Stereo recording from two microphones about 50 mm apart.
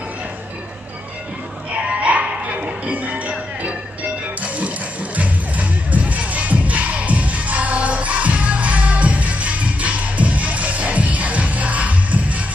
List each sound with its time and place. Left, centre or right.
1.8 s music: right